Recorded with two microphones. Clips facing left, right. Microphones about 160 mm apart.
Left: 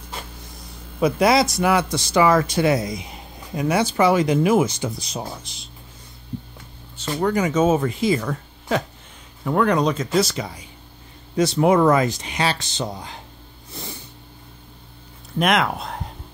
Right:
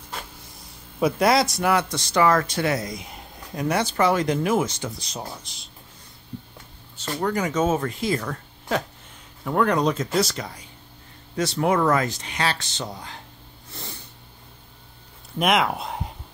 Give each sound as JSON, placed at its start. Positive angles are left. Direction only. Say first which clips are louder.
{"t": 0.9, "sound": "speech", "louder": "left 2 dB", "side_deg": 0}
{"t": 2.9, "sound": "speech", "louder": "left 4 dB", "side_deg": 0}
{"t": 7.1, "sound": "speech", "louder": "left 4 dB", "side_deg": 5}
{"t": 15.3, "sound": "speech", "louder": "left 1 dB", "side_deg": -5}